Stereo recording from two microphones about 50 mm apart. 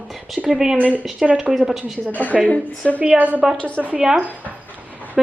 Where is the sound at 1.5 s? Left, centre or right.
Centre.